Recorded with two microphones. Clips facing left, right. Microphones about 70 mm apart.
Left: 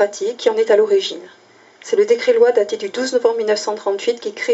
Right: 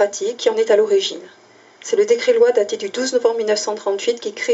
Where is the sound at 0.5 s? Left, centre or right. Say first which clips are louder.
Left 1 dB; left.